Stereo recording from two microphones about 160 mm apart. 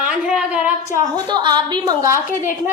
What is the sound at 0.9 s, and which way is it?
A woman's voice, 25° right (ahead or behind).